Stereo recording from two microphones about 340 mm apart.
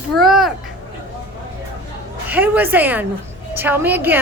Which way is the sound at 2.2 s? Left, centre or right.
Centre.